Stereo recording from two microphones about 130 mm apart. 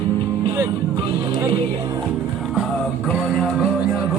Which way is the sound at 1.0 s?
40° right (ahead or behind).